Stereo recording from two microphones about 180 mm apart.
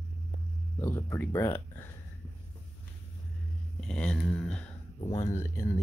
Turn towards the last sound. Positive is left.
turn(degrees=15)  # may be behind; listen again after turning